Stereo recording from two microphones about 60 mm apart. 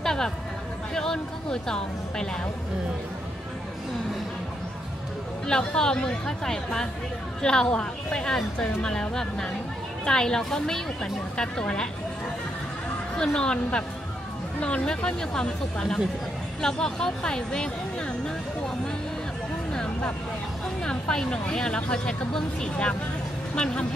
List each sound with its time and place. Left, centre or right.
0.0 s a sound: centre
0.9 s speech: centre
5.5 s speech: centre
13.1 s speech: centre
20.8 s speech: centre